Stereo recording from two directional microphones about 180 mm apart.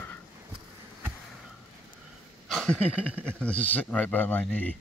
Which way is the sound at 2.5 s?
Centre (ahead or behind).